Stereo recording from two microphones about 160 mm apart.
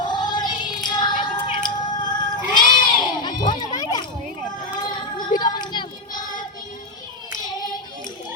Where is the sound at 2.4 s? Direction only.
25° left (ahead or behind).